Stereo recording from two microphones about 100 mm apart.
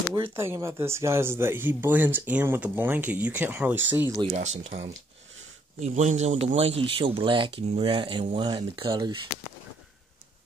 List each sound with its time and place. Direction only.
0.1 s speech: 25° right (ahead or behind)
4.2 s speech: 90° right
6.2 s speech: 90° right; by 9.2 s 55° right (ahead or behind)